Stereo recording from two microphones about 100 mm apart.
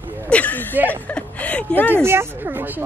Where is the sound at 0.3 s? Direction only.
15° left (ahead or behind).